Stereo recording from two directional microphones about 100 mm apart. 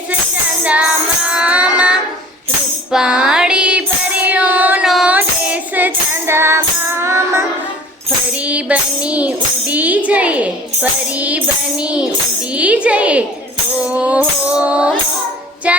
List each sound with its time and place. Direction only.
0.6 s music: 15° right (ahead or behind)
2.9 s child singing: 10° right (ahead or behind)
4.9 s music: 5° right (ahead or behind)
5.1 s music: 15° right (ahead or behind)
8.4 s music: 15° right (ahead or behind)